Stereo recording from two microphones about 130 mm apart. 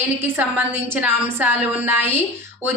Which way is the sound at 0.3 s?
10° right (ahead or behind).